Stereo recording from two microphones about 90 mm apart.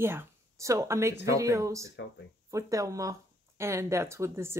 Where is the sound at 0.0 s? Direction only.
25° right (ahead or behind).